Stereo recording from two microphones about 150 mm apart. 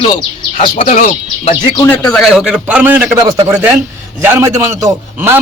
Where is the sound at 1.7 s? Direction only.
15° left (ahead or behind); by 5.3 s 15° right (ahead or behind).